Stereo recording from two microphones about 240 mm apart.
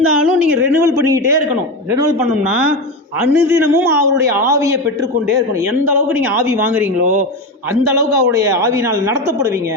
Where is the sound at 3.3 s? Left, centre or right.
Centre.